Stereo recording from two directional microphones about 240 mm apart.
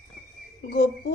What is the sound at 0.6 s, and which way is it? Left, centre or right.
Speech, left.